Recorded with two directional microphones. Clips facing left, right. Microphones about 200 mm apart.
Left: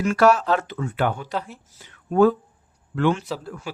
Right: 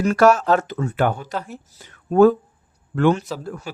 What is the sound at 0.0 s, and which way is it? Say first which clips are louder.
Speech: right 2 dB; 40° right (ahead or behind).